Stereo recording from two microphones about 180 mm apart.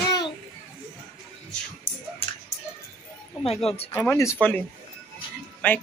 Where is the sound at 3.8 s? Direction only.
15° left (ahead or behind).